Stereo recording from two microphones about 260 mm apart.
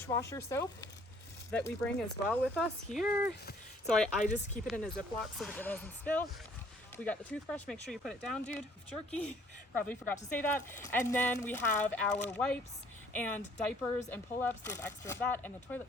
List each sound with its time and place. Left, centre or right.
0.1 s speech: centre
3.1 s speech: centre
3.8 s speech: centre
4.2 s speech: left
4.6 s speech: centre